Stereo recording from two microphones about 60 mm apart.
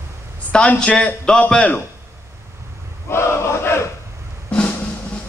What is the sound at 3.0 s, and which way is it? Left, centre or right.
Battle cry, left.